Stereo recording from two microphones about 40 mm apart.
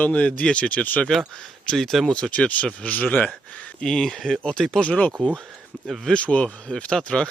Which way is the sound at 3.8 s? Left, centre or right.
Centre.